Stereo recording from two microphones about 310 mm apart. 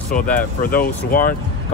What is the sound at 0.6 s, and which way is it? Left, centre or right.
Speech, left.